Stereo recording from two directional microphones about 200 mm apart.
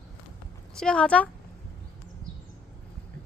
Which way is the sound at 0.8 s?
5° left (ahead or behind).